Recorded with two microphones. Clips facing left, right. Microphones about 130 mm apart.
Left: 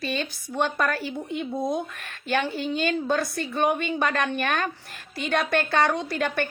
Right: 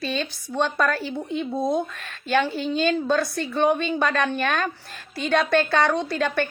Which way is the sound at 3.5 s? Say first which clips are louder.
Right 3 dB; 15° left (ahead or behind).